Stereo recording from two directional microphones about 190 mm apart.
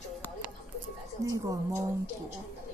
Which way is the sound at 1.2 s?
20° right (ahead or behind).